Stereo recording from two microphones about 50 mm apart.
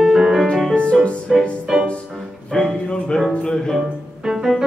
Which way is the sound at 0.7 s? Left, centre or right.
Left.